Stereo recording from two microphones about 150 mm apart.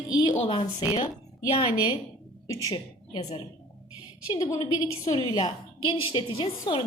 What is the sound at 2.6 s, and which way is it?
Speech, 30° left (ahead or behind).